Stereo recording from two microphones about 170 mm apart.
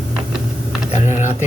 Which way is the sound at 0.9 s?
45° left (ahead or behind).